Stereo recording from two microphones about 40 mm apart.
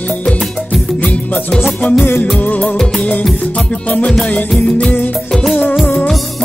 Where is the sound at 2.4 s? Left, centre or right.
Left.